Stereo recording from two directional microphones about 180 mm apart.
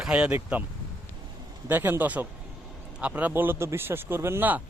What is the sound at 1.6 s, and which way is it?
Speech, 10° right (ahead or behind).